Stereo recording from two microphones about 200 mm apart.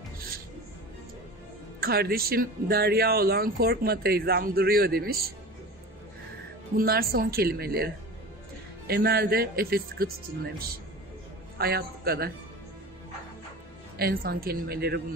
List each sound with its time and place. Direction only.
1.8 s speech: 50° right (ahead or behind)
6.8 s speech: 50° right (ahead or behind)
11.5 s a man's voice: 50° right (ahead or behind)
13.9 s speech: 50° right (ahead or behind)